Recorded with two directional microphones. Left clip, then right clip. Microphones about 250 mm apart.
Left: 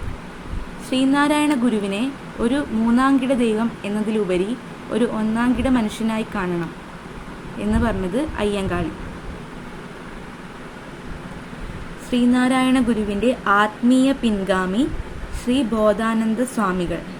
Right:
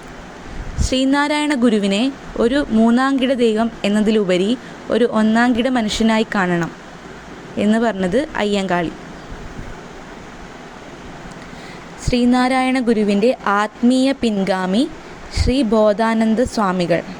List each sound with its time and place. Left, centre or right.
0.9 s speech: right
12.1 s speech: right